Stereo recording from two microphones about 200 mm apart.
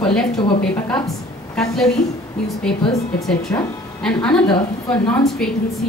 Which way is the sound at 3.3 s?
5° left (ahead or behind).